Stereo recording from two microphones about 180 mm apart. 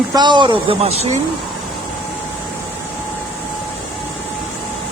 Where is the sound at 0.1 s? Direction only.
25° right (ahead or behind).